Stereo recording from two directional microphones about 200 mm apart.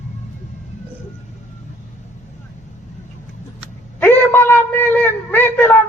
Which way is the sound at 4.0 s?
10° left (ahead or behind).